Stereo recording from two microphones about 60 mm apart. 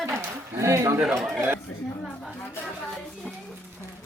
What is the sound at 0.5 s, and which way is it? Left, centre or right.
Speech, right.